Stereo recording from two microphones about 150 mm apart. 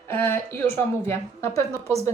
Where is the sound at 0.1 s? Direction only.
15° left (ahead or behind).